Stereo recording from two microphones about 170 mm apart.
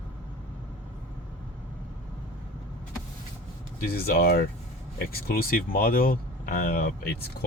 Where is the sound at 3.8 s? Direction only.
65° left (ahead or behind).